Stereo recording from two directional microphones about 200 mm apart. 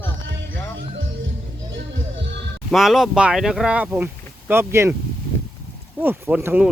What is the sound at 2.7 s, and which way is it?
Speech, centre (ahead or behind).